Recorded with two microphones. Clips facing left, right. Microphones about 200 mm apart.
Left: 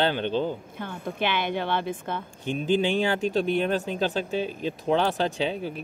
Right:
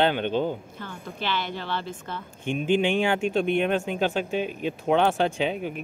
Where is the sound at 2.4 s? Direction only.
35° left (ahead or behind).